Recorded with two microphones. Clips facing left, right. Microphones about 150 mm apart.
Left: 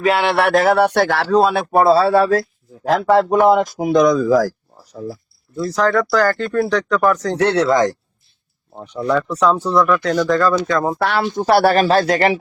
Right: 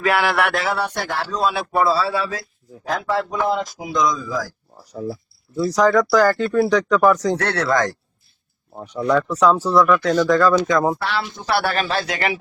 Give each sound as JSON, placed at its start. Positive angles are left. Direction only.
{"t": 0.0, "sound": "speech", "side_deg": 25}
{"t": 0.6, "sound": "speech", "side_deg": 60}
{"t": 5.0, "sound": "speech", "side_deg": -5}
{"t": 7.3, "sound": "speech", "side_deg": 15}
{"t": 8.7, "sound": "speech", "side_deg": -10}
{"t": 9.0, "sound": "speech", "side_deg": 5}
{"t": 9.3, "sound": "speech", "side_deg": -10}
{"t": 10.9, "sound": "speech", "side_deg": 55}
{"t": 11.3, "sound": "speech", "side_deg": 40}